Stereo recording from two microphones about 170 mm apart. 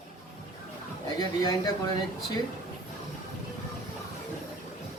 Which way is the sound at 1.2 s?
20° left (ahead or behind).